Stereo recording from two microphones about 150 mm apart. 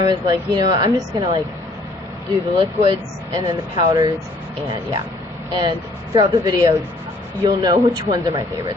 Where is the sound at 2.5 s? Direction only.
35° right (ahead or behind).